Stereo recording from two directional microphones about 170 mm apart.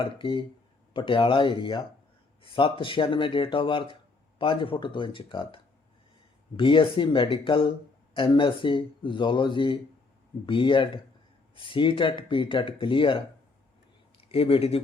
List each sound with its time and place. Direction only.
0.0 s speech: 30° left (ahead or behind)
6.6 s speech: 30° left (ahead or behind)